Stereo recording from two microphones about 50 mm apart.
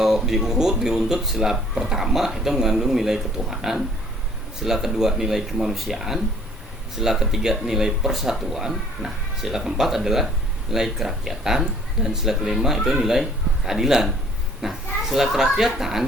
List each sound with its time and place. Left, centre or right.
0.0 s speech: centre